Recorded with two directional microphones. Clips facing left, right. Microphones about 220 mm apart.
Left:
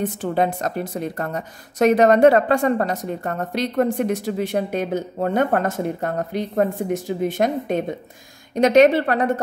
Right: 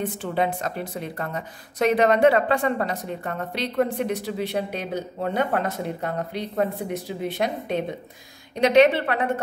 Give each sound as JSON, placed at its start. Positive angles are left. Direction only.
{"t": 0.0, "sound": "a woman's voice", "side_deg": 45}